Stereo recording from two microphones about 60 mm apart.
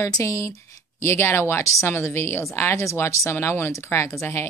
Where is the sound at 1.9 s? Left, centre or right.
Left.